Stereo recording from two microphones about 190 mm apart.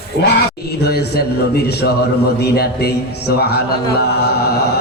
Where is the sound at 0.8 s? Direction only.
55° left (ahead or behind).